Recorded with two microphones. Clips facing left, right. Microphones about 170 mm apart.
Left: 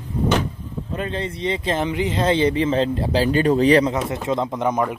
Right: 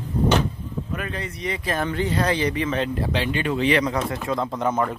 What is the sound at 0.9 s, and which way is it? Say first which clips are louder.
Speech: left 7 dB; 25° left (ahead or behind).